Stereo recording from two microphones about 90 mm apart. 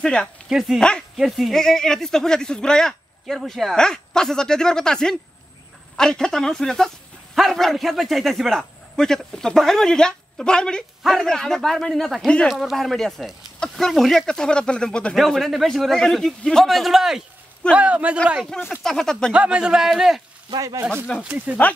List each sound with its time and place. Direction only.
0.0 s speech: 10° left (ahead or behind)
0.5 s speech: 5° right (ahead or behind)
0.7 s speech: 10° left (ahead or behind)
1.1 s speech: centre (ahead or behind)
17.7 s a man's voice: 15° right (ahead or behind)
18.7 s speech: 5° left (ahead or behind)
19.3 s a man's voice: 10° right (ahead or behind)
20.4 s a man's voice: 45° right (ahead or behind)
21.2 s a man's voice: 15° right (ahead or behind)